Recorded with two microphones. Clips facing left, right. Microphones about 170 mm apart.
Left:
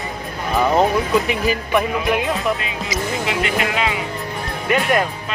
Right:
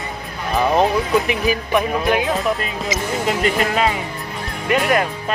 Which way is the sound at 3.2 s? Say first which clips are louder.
Right 5 dB; 40° right (ahead or behind).